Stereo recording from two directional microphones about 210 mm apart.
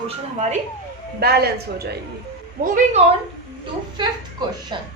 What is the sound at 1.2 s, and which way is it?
Speech, 50° right (ahead or behind).